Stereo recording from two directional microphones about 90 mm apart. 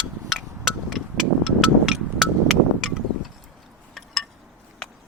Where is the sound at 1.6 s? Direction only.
5° right (ahead or behind).